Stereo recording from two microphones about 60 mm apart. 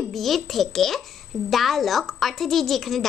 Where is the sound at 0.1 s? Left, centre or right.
Centre.